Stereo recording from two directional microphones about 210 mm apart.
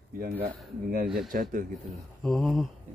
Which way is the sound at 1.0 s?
Centre (ahead or behind).